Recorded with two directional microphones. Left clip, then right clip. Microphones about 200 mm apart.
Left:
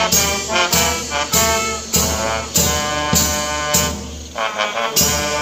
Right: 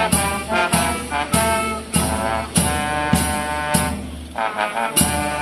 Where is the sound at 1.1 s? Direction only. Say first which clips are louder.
Left 1 dB; 45° left (ahead or behind).